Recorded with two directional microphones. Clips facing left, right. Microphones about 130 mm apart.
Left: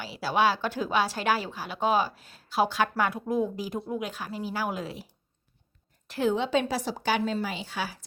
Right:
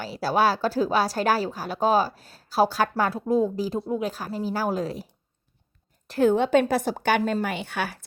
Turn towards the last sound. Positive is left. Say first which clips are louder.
# right 4 dB
turn(degrees=-60)  # may be behind; listen again after turning